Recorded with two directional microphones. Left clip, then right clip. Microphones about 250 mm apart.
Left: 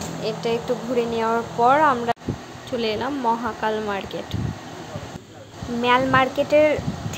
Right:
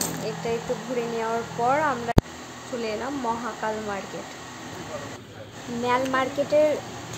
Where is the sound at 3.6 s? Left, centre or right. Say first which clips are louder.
Left 5 dB; centre.